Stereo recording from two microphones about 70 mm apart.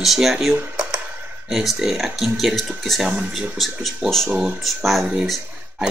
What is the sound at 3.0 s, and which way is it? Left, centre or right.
Speech, centre.